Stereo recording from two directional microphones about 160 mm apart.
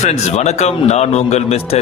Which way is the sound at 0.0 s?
45° left (ahead or behind).